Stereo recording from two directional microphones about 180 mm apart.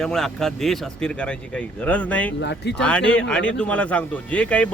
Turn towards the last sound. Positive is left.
turn(degrees=5)  # may be behind; listen again after turning